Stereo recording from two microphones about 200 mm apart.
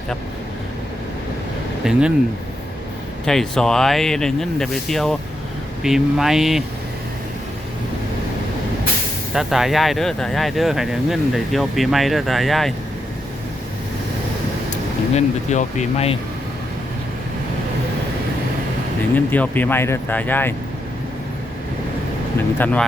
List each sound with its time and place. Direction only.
1.8 s speech: 5° right (ahead or behind)
3.2 s speech: 5° left (ahead or behind)
9.3 s speech: centre (ahead or behind)
15.1 s speech: 35° left (ahead or behind)
19.1 s speech: 10° left (ahead or behind)
22.5 s speech: 10° left (ahead or behind)